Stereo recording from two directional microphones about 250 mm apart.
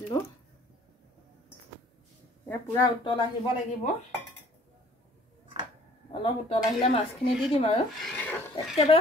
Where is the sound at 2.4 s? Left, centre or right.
Centre.